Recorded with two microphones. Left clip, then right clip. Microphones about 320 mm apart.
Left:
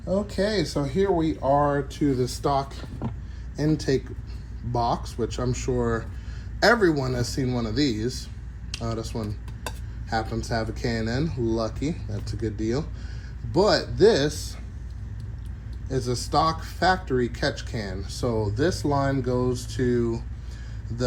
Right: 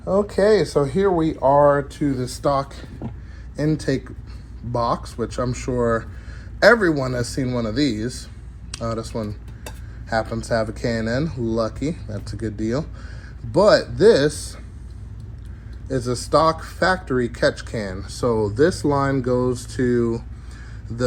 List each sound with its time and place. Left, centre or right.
0.3 s speech: centre
5.7 s speech: right
6.6 s speech: centre
8.7 s dishes: centre
10.3 s speech: centre
15.9 s speech: centre